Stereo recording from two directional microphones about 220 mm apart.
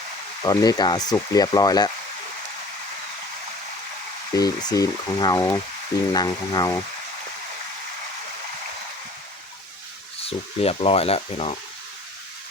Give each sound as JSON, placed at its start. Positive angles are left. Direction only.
{"t": 0.4, "sound": "speech", "side_deg": 15}
{"t": 4.4, "sound": "speech", "side_deg": 15}
{"t": 10.2, "sound": "speech", "side_deg": 25}